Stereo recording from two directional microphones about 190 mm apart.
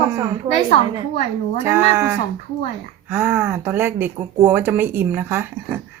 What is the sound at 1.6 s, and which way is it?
Speech, 10° right (ahead or behind).